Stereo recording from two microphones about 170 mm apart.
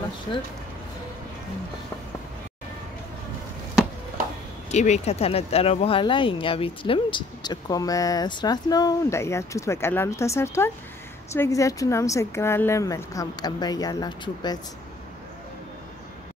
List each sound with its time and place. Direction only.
4.6 s speech: 40° left (ahead or behind); by 14.6 s 25° left (ahead or behind)